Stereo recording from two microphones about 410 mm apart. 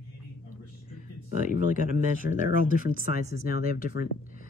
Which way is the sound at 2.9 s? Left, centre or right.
Centre.